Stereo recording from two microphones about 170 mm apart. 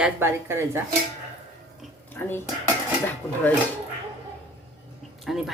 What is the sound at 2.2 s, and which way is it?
Speech, 10° left (ahead or behind).